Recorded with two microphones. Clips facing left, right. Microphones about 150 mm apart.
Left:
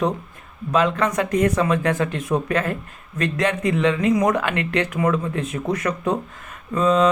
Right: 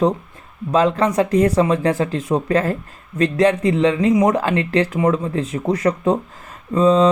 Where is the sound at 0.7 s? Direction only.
30° right (ahead or behind).